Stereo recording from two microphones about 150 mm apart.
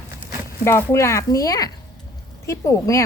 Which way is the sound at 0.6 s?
15° left (ahead or behind).